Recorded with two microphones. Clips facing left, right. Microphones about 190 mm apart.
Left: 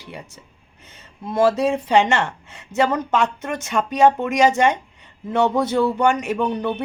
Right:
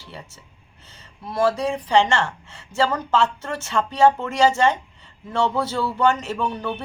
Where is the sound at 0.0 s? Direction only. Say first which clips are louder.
Left 3 dB; 15° left (ahead or behind).